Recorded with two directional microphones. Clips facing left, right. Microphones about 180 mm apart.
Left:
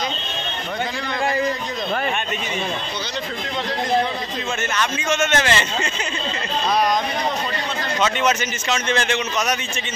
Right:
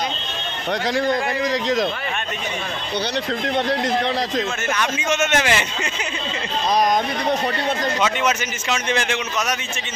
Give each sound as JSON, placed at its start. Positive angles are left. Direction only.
{"t": 4.7, "sound": "a man's voice", "side_deg": -15}
{"t": 8.0, "sound": "a man's voice", "side_deg": -10}